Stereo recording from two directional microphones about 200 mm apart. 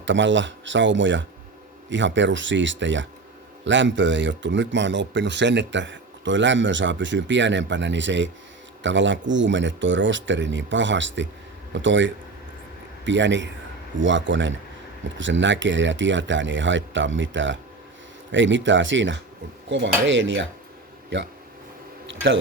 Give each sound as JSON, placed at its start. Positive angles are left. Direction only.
{"t": 0.0, "sound": "speech", "side_deg": -65}